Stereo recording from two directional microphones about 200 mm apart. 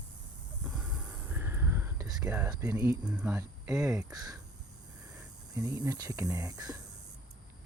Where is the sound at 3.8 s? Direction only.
15° right (ahead or behind).